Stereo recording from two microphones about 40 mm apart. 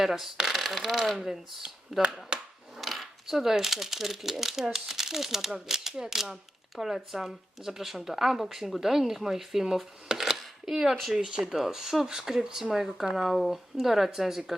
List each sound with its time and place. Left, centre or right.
0.0 s speech: centre
1.6 s speech: right
2.3 s a sound: right
2.8 s speech: centre; by 11.5 s right
11.5 s speech: centre